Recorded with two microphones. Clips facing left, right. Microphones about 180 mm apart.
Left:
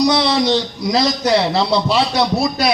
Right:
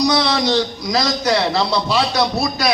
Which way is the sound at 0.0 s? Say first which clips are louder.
Left 2 dB; 25° left (ahead or behind).